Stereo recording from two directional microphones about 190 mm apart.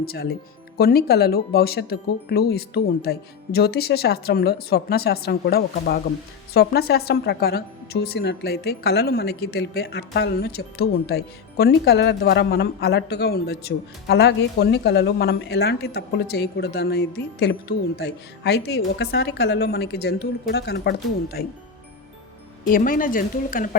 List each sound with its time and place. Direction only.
0.0 s speech: 55° left (ahead or behind)
22.6 s speech: 45° left (ahead or behind)